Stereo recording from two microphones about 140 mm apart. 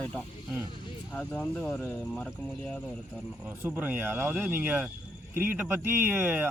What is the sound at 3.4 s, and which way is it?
Speech, 15° right (ahead or behind).